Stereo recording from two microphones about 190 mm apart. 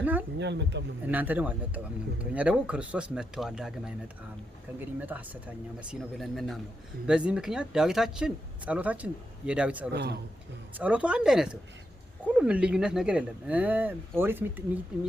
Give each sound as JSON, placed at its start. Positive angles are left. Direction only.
{"t": 0.0, "sound": "a sound", "side_deg": -10}
{"t": 0.3, "sound": "speech", "side_deg": -65}
{"t": 1.0, "sound": "speech", "side_deg": -10}
{"t": 9.9, "sound": "speech", "side_deg": -60}
{"t": 10.8, "sound": "speech", "side_deg": -5}